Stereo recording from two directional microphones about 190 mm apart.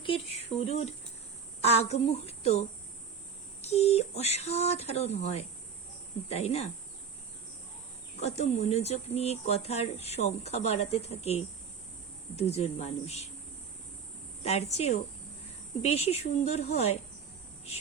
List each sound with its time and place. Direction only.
0.0 s speech: 30° left (ahead or behind)
8.2 s speech: 35° left (ahead or behind)
14.4 s speech: 35° left (ahead or behind)